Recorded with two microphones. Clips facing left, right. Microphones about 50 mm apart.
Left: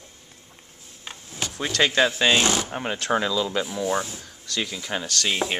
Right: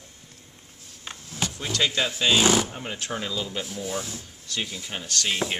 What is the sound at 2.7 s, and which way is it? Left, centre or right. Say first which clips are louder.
Speech: left 8 dB; left.